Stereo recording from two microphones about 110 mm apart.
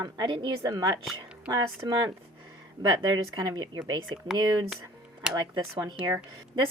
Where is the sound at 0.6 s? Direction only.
35° right (ahead or behind).